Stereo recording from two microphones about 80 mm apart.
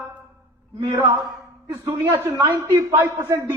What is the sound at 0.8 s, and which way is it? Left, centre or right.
A man's voice, right.